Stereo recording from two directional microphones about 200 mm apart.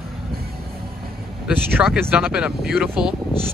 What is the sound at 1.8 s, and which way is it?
Speech, 10° right (ahead or behind).